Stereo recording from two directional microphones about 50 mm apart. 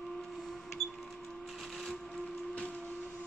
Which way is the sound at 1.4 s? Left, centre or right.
Centre.